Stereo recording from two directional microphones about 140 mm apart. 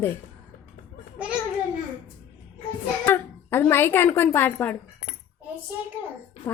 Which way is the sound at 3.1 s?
15° left (ahead or behind).